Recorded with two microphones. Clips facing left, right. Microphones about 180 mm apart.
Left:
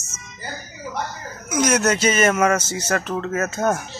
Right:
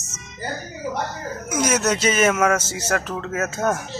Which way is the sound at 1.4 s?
5° right (ahead or behind).